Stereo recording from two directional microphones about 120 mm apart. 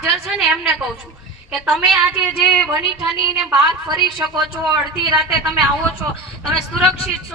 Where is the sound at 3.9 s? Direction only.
35° right (ahead or behind).